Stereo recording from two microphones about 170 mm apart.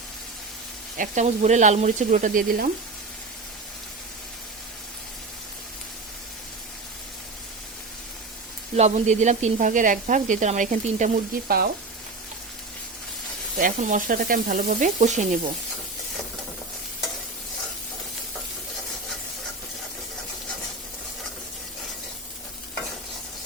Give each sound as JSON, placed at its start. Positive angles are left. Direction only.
{"t": 0.9, "sound": "speech", "side_deg": -45}
{"t": 8.7, "sound": "speech", "side_deg": -40}
{"t": 11.4, "sound": "speech", "side_deg": -65}
{"t": 13.6, "sound": "speech", "side_deg": -50}